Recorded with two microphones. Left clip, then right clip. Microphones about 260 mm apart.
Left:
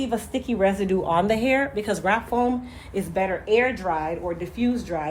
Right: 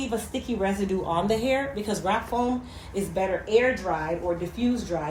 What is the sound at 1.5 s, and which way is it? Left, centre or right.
Speech, left.